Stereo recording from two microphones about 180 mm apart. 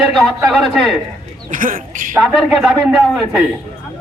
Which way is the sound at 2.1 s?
Centre (ahead or behind).